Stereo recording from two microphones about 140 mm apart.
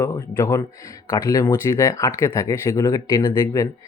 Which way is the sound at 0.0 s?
20° left (ahead or behind).